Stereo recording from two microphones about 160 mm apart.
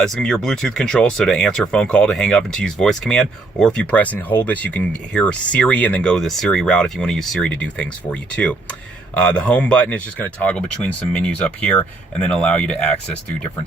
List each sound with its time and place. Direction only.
0.0 s speech: 5° left (ahead or behind)